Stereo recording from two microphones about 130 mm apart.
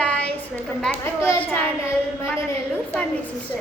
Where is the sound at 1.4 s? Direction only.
10° left (ahead or behind).